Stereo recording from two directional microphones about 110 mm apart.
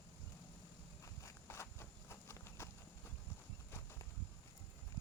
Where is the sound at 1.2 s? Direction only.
25° left (ahead or behind).